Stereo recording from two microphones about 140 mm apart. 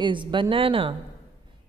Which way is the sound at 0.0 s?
35° right (ahead or behind).